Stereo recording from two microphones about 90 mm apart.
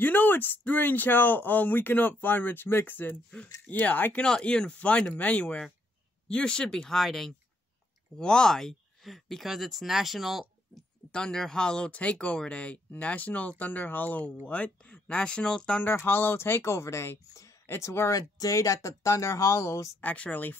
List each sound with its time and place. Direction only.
0.0 s speech: 20° left (ahead or behind); by 10.4 s centre (ahead or behind)
11.1 s speech: 10° left (ahead or behind)
15.8 s speech: 25° left (ahead or behind)
20.0 s speech: 15° left (ahead or behind)